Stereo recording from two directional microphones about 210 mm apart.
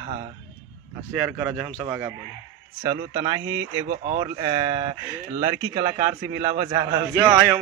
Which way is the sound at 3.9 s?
40° right (ahead or behind).